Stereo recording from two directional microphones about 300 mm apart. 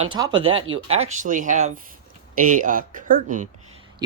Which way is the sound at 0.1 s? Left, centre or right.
Centre.